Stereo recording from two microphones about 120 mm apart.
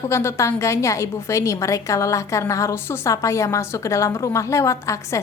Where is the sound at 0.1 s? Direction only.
25° left (ahead or behind).